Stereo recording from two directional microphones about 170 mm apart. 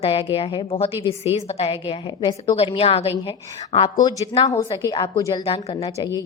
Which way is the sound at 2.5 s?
35° left (ahead or behind).